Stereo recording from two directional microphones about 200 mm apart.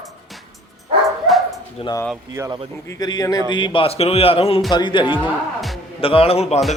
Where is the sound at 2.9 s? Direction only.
20° left (ahead or behind).